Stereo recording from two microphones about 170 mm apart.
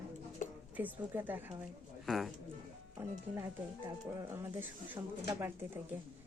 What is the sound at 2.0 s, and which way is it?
Speech, centre (ahead or behind).